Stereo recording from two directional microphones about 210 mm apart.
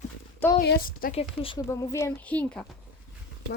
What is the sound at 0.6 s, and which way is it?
Speech, 45° left (ahead or behind).